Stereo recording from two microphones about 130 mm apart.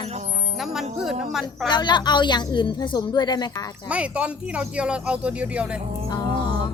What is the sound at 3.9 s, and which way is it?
Speech, 10° right (ahead or behind).